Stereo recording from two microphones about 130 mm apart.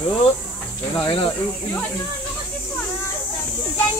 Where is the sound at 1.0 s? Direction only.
45° left (ahead or behind).